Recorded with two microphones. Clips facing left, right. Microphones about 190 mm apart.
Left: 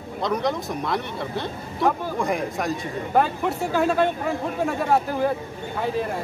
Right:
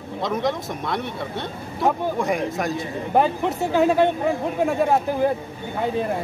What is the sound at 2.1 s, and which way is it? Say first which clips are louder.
Speech: right 2 dB; centre (ahead or behind).